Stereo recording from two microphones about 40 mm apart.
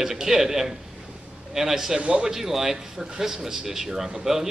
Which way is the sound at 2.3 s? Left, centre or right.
Centre.